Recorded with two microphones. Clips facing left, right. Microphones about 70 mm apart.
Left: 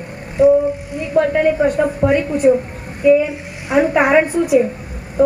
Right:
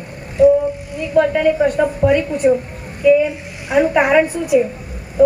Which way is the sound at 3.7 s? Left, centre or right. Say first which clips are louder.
Even; left.